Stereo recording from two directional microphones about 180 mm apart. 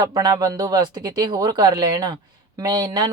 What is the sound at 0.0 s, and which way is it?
Speech, 20° right (ahead or behind).